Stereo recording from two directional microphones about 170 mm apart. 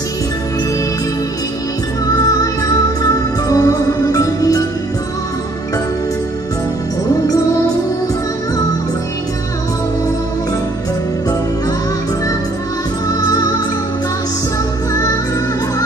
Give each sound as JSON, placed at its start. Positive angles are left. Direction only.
{"t": 3.0, "sound": "music", "side_deg": 20}